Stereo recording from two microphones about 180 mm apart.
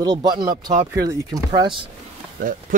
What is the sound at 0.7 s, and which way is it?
Speech, 20° right (ahead or behind).